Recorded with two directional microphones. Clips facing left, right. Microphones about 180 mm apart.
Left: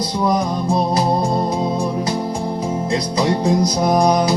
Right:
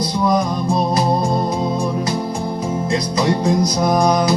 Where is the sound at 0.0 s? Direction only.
10° left (ahead or behind).